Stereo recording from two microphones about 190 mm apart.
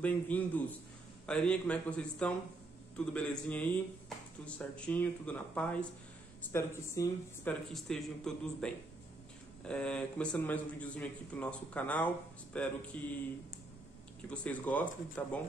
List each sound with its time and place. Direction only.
0.0 s a man's voice: 10° left (ahead or behind)
7.7 s a man's voice: centre (ahead or behind)
14.3 s a man's voice: 5° left (ahead or behind)